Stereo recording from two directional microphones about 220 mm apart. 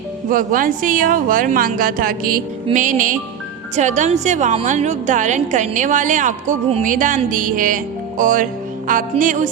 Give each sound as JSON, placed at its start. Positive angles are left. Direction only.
{"t": 0.3, "sound": "a woman's voice", "side_deg": -40}